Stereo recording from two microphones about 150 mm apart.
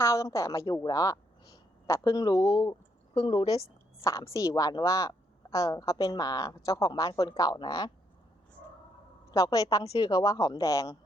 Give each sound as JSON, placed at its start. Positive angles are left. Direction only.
{"t": 0.0, "sound": "a woman's voice", "side_deg": 20}
{"t": 9.3, "sound": "a woman's voice", "side_deg": 20}